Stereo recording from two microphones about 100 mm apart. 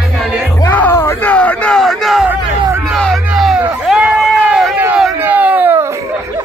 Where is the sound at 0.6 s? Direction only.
20° left (ahead or behind).